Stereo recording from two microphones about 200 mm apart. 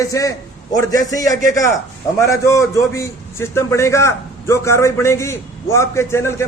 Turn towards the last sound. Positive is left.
turn(degrees=15)  # may be behind; listen again after turning